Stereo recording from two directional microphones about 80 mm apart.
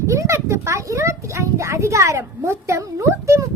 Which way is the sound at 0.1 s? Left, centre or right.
Right.